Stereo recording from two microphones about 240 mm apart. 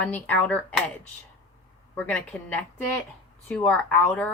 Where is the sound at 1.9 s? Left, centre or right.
Centre.